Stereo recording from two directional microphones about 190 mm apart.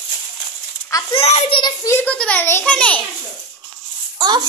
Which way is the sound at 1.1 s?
30° left (ahead or behind).